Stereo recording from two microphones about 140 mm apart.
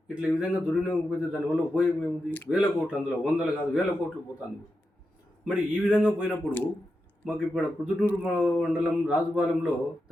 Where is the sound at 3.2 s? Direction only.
5° right (ahead or behind).